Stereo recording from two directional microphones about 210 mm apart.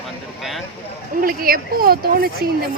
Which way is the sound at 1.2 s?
45° right (ahead or behind).